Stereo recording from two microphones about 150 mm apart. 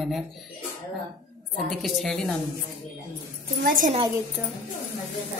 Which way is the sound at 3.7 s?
60° right (ahead or behind).